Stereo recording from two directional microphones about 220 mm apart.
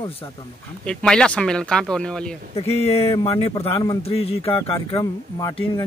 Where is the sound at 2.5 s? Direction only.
25° left (ahead or behind).